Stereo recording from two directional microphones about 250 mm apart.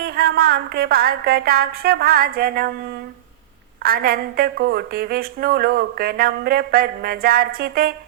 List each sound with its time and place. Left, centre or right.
0.0 s a woman's voice: right
3.8 s a woman's voice: right